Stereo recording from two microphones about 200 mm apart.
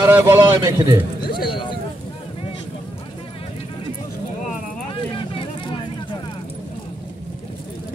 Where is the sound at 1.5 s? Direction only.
25° left (ahead or behind).